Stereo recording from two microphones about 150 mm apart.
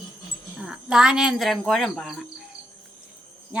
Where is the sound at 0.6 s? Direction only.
5° right (ahead or behind).